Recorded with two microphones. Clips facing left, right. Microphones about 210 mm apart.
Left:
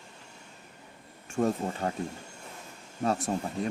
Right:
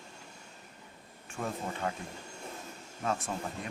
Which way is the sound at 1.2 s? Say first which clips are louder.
Left 9 dB; 40° left (ahead or behind).